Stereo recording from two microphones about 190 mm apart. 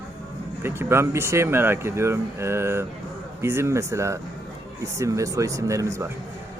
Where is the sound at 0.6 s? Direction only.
10° right (ahead or behind).